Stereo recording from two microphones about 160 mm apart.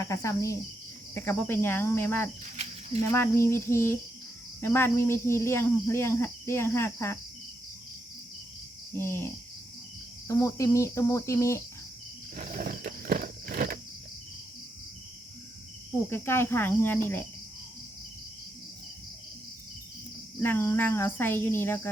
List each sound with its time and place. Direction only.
0.0 s cricket: 20° left (ahead or behind)
1.1 s speech: 10° left (ahead or behind)
9.0 s speech: 15° left (ahead or behind)
10.2 s cricket: 20° left (ahead or behind)
12.4 s a sound: 65° right (ahead or behind)
16.0 s speech: 15° left (ahead or behind)
20.4 s speech: 15° left (ahead or behind)